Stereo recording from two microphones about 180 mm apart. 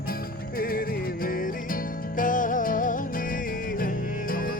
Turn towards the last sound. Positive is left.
turn(degrees=50)  # may be behind; listen again after turning